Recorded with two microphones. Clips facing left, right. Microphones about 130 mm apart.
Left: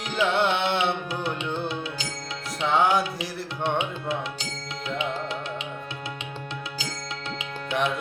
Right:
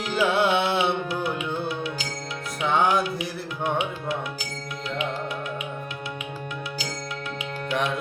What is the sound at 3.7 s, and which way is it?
Music, 25° left (ahead or behind).